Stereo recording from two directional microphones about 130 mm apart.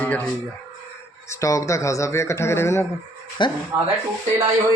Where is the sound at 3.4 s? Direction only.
35° left (ahead or behind).